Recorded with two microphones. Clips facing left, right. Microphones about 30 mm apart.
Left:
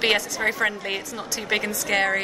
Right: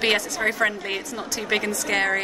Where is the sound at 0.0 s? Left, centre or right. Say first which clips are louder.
Even; centre.